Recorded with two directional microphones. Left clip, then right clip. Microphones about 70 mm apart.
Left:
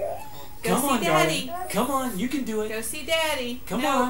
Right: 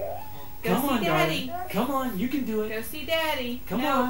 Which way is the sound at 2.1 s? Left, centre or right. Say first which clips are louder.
Left 1 dB; centre.